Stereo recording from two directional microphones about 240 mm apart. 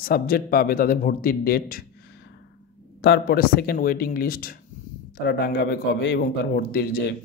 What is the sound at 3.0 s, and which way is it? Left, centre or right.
Speech, left.